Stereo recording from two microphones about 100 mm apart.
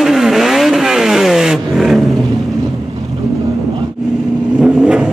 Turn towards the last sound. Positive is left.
turn(degrees=-10)  # may be behind; listen again after turning